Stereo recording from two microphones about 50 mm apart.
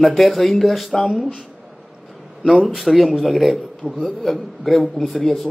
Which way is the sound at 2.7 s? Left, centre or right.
Centre.